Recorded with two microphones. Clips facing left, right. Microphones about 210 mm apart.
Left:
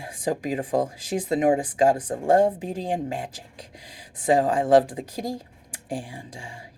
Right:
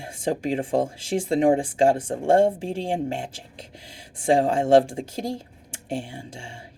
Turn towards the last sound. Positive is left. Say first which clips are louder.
# right 1 dB
turn(degrees=-25)  # may be behind; listen again after turning